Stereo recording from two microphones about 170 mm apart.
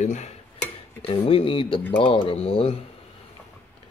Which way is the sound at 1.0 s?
35° left (ahead or behind).